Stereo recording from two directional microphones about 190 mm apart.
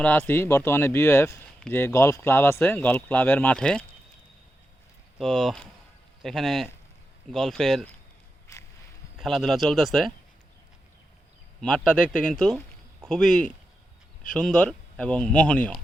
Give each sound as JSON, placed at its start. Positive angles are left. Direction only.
{"t": 0.0, "sound": "speech", "side_deg": 10}
{"t": 5.2, "sound": "speech", "side_deg": 0}
{"t": 8.5, "sound": "a sound", "side_deg": 15}
{"t": 9.1, "sound": "speech", "side_deg": 0}
{"t": 11.6, "sound": "speech", "side_deg": 5}